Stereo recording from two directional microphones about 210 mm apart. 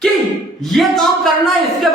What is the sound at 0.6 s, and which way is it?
Speech, centre (ahead or behind).